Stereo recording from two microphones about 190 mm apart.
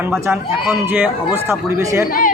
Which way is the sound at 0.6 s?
10° right (ahead or behind).